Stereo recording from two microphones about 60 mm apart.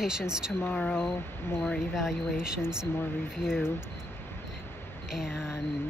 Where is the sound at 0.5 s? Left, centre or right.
Left.